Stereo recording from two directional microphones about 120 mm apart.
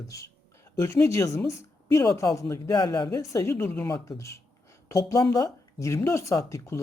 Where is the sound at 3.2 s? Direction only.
25° left (ahead or behind).